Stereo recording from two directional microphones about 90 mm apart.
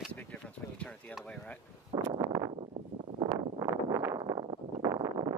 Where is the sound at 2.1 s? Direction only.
40° right (ahead or behind).